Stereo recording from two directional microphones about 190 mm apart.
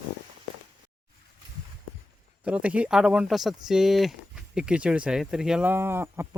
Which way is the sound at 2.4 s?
5° right (ahead or behind).